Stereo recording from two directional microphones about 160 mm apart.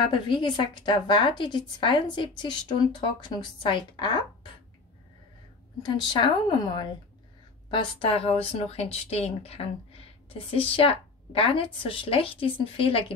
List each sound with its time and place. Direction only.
0.1 s speech: 30° left (ahead or behind)
5.8 s a woman's voice: 30° left (ahead or behind)